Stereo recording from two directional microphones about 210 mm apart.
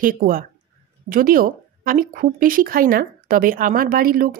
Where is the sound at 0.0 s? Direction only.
45° right (ahead or behind).